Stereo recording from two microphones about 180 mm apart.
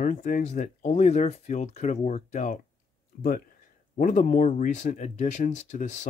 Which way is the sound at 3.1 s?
55° left (ahead or behind).